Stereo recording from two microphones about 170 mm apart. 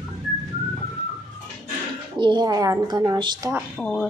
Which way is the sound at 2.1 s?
25° right (ahead or behind).